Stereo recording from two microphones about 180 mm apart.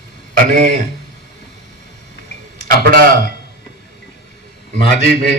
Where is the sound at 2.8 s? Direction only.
55° right (ahead or behind).